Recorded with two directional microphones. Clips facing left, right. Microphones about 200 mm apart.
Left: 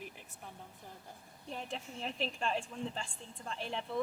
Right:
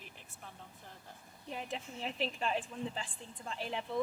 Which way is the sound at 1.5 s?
5° right (ahead or behind).